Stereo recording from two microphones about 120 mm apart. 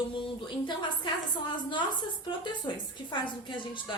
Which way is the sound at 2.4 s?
40° left (ahead or behind).